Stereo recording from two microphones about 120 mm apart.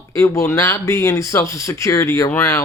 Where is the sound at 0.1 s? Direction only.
25° left (ahead or behind).